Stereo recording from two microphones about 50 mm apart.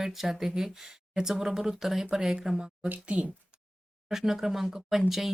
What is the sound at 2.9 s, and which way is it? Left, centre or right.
Speech, right.